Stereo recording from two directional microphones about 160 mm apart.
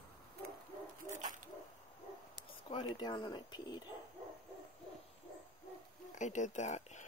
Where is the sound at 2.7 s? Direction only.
30° left (ahead or behind).